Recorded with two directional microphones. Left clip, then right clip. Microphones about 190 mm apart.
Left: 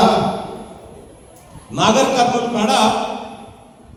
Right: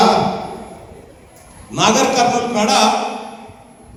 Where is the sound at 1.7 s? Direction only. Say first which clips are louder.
Even; 25° right (ahead or behind).